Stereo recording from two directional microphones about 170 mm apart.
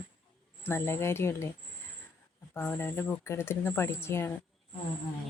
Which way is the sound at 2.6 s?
10° left (ahead or behind).